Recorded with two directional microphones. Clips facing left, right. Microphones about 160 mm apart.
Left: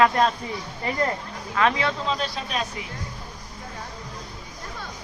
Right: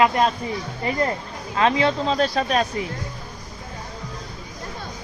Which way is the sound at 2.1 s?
45° right (ahead or behind).